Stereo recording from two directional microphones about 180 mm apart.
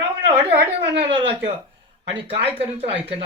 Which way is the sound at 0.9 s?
30° right (ahead or behind).